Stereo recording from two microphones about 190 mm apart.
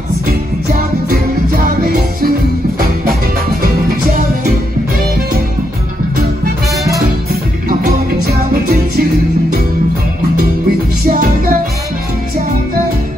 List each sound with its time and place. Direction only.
1.0 s music: 50° right (ahead or behind)
7.8 s music: 50° right (ahead or behind)
11.1 s music: 50° right (ahead or behind)